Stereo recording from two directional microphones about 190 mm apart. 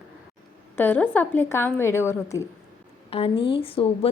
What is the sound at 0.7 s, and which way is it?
A woman's voice, 10° left (ahead or behind).